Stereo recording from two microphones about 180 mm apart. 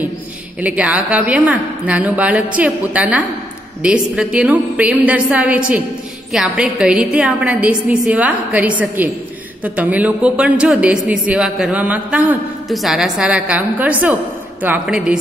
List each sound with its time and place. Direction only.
0.6 s a man's voice: 10° right (ahead or behind)